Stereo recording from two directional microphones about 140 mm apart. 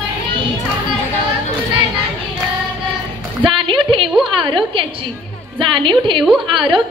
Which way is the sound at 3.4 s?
35° right (ahead or behind).